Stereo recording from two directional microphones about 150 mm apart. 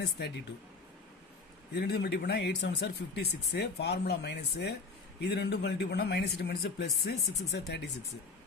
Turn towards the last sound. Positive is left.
turn(degrees=90)